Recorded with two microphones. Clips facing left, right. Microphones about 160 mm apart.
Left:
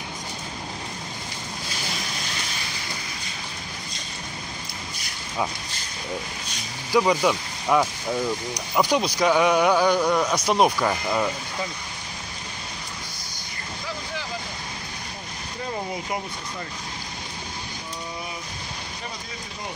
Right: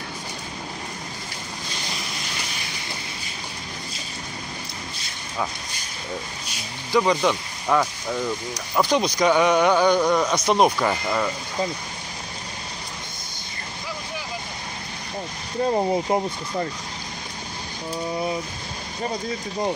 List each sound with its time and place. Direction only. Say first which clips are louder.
6.9 s speech: even; 10° left (ahead or behind)
15.7 s speech: right 8 dB; 35° right (ahead or behind)